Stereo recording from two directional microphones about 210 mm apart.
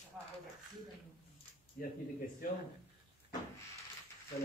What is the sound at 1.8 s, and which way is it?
Speech, 40° left (ahead or behind).